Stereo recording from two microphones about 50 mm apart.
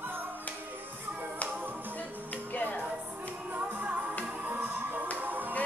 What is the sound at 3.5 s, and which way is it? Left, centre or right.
Music, right.